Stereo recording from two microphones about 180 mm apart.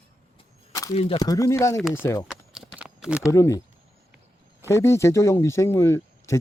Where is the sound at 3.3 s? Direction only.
15° left (ahead or behind).